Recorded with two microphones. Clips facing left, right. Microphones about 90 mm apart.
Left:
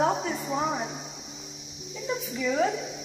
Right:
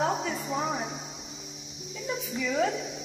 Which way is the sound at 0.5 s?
5° left (ahead or behind).